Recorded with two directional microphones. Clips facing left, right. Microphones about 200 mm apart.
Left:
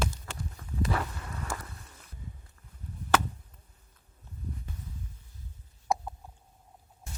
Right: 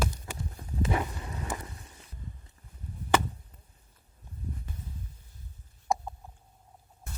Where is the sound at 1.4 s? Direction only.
20° right (ahead or behind).